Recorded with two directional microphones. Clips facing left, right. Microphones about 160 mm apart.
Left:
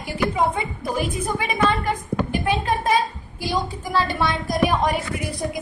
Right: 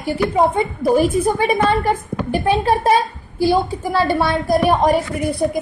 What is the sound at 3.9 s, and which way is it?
A woman's voice, 35° right (ahead or behind).